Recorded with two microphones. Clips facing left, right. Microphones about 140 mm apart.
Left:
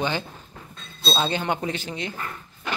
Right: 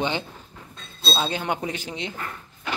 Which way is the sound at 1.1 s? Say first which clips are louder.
Left 1 dB; 5° right (ahead or behind).